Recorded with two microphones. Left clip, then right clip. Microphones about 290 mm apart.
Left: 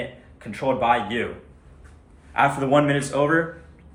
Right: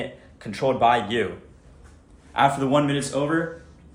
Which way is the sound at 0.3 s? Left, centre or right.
Right.